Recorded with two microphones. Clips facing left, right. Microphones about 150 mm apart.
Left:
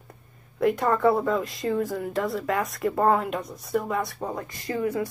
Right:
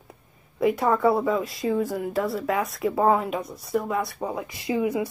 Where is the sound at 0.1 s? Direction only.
5° right (ahead or behind).